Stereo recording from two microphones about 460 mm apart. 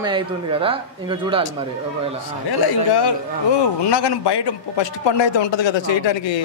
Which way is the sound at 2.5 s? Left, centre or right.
Left.